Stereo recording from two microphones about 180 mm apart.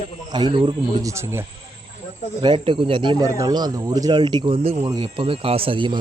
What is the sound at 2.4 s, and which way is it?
Speech, 25° right (ahead or behind).